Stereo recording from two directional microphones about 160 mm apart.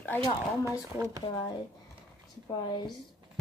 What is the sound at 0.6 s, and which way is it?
Speech, 20° right (ahead or behind).